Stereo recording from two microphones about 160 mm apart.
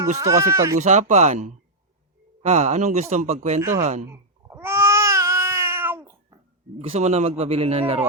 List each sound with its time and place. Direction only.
0.2 s speech: 20° right (ahead or behind)
0.8 s a man's voice: 50° right (ahead or behind)
3.6 s speech: 20° right (ahead or behind)
4.1 s a sound: 15° right (ahead or behind)
6.7 s a man's voice: 40° right (ahead or behind)